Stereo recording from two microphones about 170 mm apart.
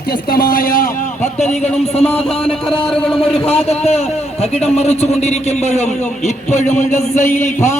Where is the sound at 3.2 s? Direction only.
35° left (ahead or behind).